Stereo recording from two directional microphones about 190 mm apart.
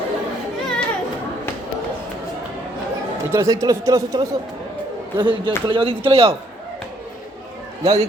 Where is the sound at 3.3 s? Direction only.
15° right (ahead or behind).